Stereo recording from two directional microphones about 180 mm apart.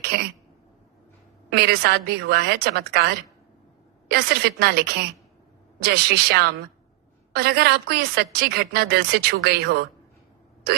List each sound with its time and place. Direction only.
1.5 s a woman's voice: 65° right (ahead or behind)
4.1 s a woman's voice: 65° right (ahead or behind)